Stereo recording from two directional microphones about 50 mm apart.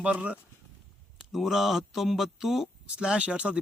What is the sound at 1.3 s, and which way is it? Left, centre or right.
Speech, centre.